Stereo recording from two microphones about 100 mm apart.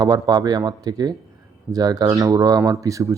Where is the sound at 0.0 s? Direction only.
40° right (ahead or behind).